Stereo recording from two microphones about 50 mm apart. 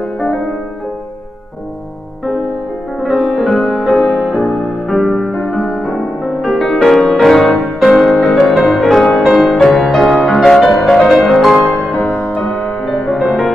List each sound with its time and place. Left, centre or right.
0.2 s music: centre
3.0 s music: centre
11.9 s music: left
12.4 s music: centre